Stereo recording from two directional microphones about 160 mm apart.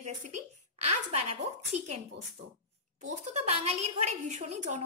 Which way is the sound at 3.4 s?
40° right (ahead or behind).